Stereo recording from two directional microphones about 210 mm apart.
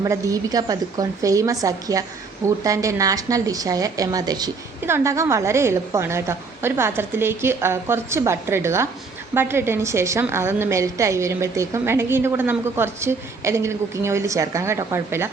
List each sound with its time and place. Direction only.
0.0 s a woman's voice: 15° right (ahead or behind)